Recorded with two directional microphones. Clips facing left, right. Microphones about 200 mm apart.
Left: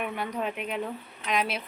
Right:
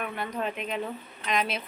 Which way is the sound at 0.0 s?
10° left (ahead or behind).